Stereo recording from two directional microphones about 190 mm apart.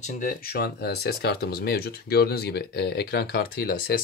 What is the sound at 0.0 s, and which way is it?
Speech, 50° left (ahead or behind).